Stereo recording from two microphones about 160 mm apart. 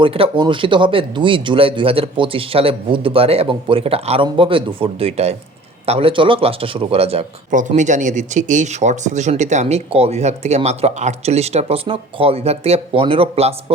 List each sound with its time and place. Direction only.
0.0 s speech: 35° right (ahead or behind)
7.8 s speech: 50° right (ahead or behind)